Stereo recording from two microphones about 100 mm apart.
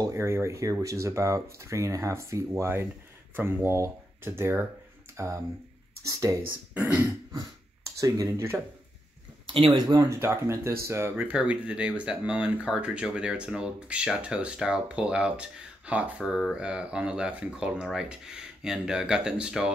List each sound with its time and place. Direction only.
0.0 s speech: 30° right (ahead or behind)
6.7 s speech: 15° right (ahead or behind)
8.0 s speech: 30° right (ahead or behind)
9.5 s speech: 55° right (ahead or behind)
9.8 s speech: 35° right (ahead or behind); by 19.7 s 10° right (ahead or behind)